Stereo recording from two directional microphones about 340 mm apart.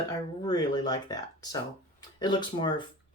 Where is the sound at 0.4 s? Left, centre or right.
Centre.